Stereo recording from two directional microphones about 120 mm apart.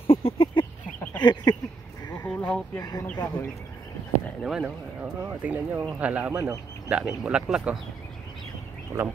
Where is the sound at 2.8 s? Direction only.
30° left (ahead or behind).